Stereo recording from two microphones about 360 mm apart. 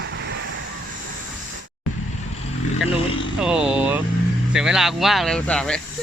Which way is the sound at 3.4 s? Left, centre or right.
Centre.